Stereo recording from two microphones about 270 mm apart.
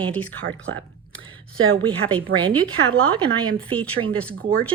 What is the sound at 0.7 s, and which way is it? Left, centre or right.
Speech, right.